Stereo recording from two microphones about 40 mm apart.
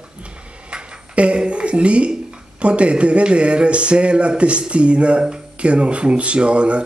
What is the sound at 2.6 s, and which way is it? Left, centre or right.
Speech, right.